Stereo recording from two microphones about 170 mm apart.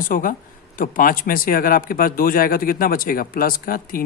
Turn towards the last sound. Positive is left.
turn(degrees=55)  # may be behind; listen again after turning